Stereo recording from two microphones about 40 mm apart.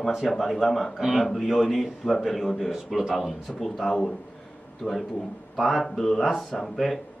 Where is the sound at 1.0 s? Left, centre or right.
Centre.